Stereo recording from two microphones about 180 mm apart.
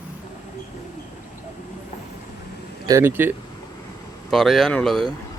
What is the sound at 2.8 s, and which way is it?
Speech, 15° right (ahead or behind).